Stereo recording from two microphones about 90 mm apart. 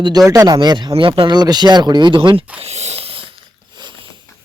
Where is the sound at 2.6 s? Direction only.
90° right.